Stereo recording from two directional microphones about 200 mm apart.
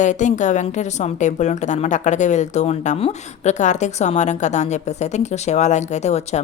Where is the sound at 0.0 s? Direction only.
35° left (ahead or behind).